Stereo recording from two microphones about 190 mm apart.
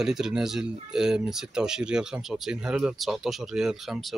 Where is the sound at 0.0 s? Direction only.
5° right (ahead or behind).